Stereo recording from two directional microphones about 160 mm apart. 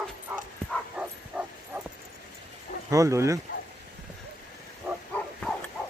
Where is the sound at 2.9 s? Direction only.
20° right (ahead or behind).